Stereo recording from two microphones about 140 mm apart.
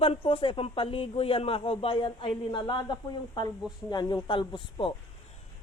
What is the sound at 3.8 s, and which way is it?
Speech, 30° left (ahead or behind).